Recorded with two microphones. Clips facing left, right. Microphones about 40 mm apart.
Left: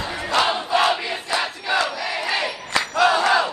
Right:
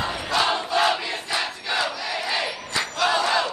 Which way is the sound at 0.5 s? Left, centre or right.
Centre.